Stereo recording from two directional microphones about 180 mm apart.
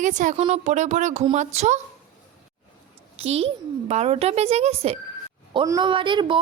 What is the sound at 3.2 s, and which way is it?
A woman's voice, 35° right (ahead or behind).